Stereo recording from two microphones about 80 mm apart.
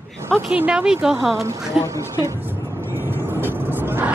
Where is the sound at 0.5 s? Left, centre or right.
Centre.